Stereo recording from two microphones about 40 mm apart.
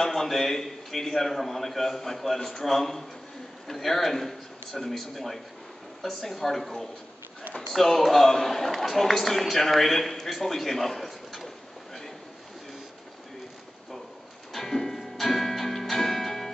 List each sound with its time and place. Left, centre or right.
0.0 s a man's voice: centre
14.5 s music: centre